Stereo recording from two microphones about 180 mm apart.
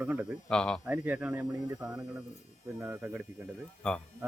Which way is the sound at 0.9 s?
10° right (ahead or behind).